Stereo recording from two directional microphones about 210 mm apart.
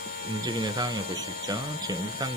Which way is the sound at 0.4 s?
20° right (ahead or behind).